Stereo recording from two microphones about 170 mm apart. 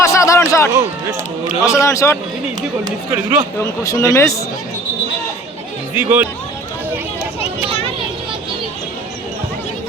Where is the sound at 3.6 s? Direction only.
20° left (ahead or behind).